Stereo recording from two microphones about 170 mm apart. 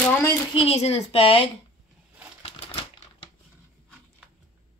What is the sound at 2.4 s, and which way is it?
Typewriter, 35° left (ahead or behind).